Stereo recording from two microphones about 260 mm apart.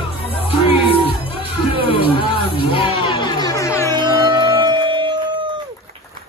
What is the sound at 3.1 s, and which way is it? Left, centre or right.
Music, centre.